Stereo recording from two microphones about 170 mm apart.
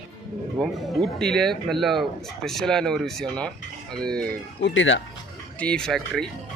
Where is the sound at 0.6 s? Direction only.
5° left (ahead or behind).